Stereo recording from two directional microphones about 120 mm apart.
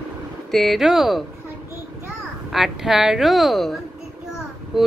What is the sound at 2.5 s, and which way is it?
Speech, 5° right (ahead or behind).